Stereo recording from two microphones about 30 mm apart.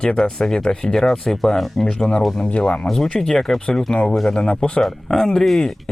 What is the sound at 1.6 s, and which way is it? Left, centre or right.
Speech, centre.